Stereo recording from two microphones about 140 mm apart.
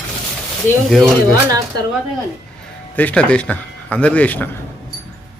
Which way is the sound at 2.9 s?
10° left (ahead or behind).